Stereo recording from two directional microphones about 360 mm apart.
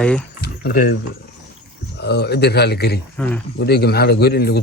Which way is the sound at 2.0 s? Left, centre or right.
Left.